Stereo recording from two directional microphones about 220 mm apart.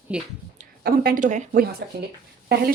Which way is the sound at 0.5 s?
40° right (ahead or behind).